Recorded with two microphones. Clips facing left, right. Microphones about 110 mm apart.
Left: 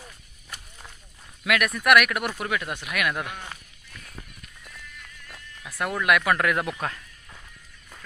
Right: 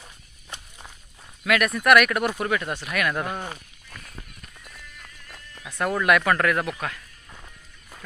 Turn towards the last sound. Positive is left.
turn(degrees=30)  # may be behind; listen again after turning